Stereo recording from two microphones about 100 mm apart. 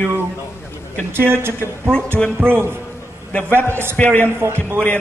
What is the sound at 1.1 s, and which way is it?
A man's voice, 25° right (ahead or behind).